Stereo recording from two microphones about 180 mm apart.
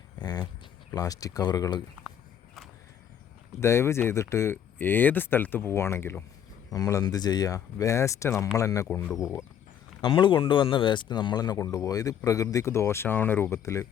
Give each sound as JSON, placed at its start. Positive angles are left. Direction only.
{"t": 0.2, "sound": "speech", "side_deg": 25}
{"t": 3.6, "sound": "speech", "side_deg": 15}
{"t": 10.0, "sound": "speech", "side_deg": 25}